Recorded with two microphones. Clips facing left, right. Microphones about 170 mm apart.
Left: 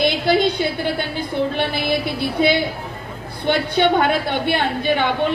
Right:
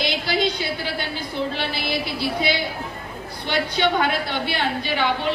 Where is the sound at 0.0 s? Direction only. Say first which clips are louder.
Left 6 dB; 55° left (ahead or behind).